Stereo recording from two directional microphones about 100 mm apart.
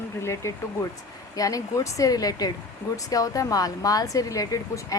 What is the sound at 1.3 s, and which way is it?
A woman's voice, 35° left (ahead or behind).